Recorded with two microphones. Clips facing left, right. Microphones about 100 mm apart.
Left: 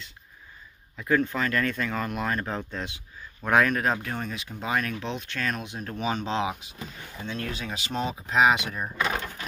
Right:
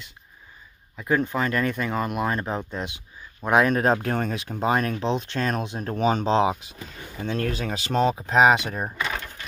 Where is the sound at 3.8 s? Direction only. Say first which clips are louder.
Right 5 dB; 35° right (ahead or behind).